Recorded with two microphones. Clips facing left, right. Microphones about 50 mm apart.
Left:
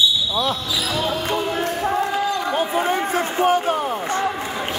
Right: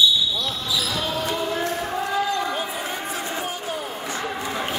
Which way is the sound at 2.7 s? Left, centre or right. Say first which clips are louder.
Left 9 dB; left.